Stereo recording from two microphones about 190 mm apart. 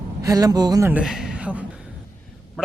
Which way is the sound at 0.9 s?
5° right (ahead or behind).